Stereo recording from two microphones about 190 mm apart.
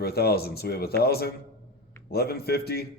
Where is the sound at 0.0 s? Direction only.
55° left (ahead or behind).